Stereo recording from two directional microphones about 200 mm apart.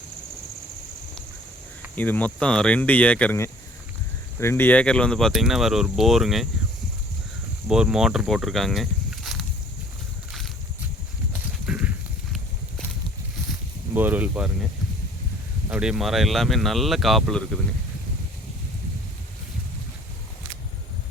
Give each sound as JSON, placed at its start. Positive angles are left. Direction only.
{"t": 2.0, "sound": "speech", "side_deg": 10}
{"t": 7.7, "sound": "speech", "side_deg": -5}
{"t": 11.6, "sound": "horse", "side_deg": -5}
{"t": 13.9, "sound": "speech", "side_deg": -10}
{"t": 15.7, "sound": "speech", "side_deg": -5}